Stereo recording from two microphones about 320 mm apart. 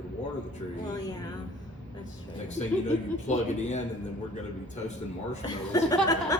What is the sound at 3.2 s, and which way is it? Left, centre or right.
Speech, left.